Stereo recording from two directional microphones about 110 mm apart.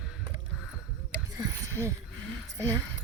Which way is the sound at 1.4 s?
25° right (ahead or behind).